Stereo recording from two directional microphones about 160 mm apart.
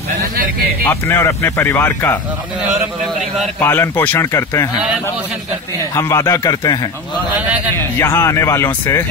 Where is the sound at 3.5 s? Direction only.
15° left (ahead or behind).